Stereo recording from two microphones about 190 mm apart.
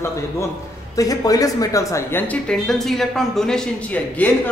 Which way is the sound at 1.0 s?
20° left (ahead or behind).